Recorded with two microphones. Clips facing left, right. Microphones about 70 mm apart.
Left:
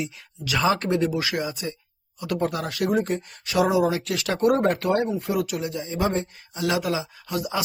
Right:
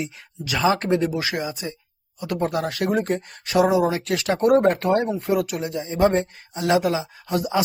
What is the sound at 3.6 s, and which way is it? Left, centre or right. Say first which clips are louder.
Speech: right 2 dB; right.